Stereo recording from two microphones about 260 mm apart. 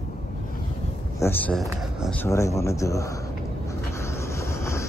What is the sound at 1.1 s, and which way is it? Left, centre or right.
Speech, centre.